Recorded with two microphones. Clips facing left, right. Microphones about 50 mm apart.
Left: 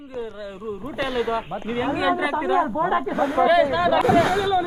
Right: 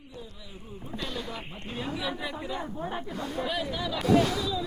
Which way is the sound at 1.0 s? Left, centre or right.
Left.